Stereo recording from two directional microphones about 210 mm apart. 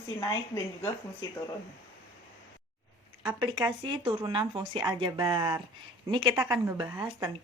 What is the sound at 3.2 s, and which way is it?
A woman's voice, 20° right (ahead or behind).